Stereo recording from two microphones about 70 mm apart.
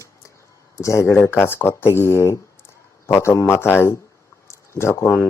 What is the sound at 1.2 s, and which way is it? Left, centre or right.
Speech, left.